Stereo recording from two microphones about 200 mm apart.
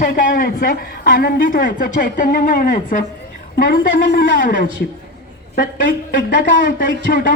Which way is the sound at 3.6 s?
55° left (ahead or behind).